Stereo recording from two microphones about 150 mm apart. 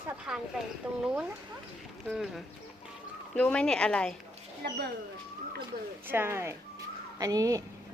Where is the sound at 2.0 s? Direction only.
Centre (ahead or behind).